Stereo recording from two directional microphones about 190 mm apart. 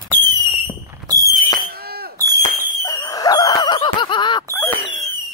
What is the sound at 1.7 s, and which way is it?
Smoke detector, 55° right (ahead or behind).